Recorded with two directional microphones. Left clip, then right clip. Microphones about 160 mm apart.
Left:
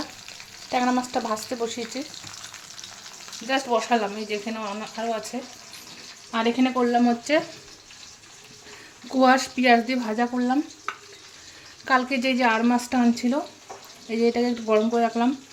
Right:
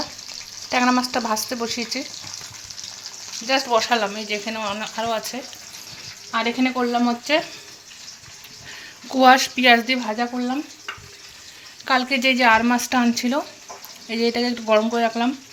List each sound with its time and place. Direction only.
0.7 s speech: centre (ahead or behind)
3.4 s speech: 10° left (ahead or behind)
6.3 s speech: 20° left (ahead or behind)
9.0 s speech: 5° left (ahead or behind); by 10.6 s 25° left (ahead or behind)
11.9 s speech: 10° left (ahead or behind)